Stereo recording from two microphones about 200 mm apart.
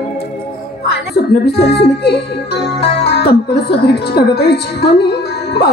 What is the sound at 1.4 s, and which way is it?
Music, 55° left (ahead or behind).